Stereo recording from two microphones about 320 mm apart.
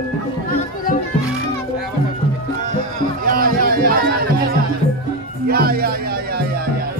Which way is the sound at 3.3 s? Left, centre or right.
Right.